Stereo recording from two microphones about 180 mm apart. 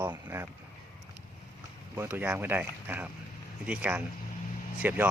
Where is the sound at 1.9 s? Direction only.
10° right (ahead or behind).